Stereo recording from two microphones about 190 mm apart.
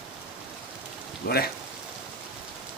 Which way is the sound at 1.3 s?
55° left (ahead or behind).